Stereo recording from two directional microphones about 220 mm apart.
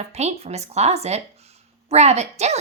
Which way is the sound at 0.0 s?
30° right (ahead or behind).